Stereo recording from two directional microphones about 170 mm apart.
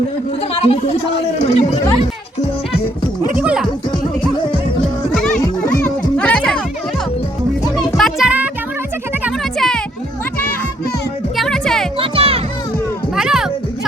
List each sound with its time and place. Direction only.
0.6 s speech: 35° left (ahead or behind)
3.3 s music: 5° right (ahead or behind)
5.6 s music: 10° left (ahead or behind)
7.8 s music: centre (ahead or behind)
9.4 s a sound: 5° left (ahead or behind)
11.3 s music: 5° left (ahead or behind)
11.9 s music: 35° right (ahead or behind)
13.1 s music: 5° right (ahead or behind)